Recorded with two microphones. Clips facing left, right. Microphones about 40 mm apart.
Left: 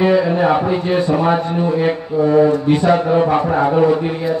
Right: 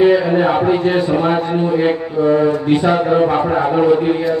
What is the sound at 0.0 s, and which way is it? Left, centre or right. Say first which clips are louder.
A man's voice: right 2 dB; centre.